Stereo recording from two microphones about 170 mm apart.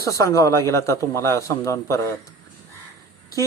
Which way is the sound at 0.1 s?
20° left (ahead or behind).